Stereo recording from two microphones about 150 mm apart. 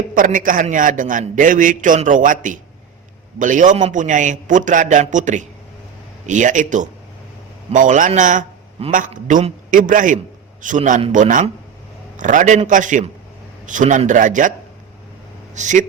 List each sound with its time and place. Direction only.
0.1 s a man's voice: 65° right (ahead or behind)
15.5 s a man's voice: 55° right (ahead or behind)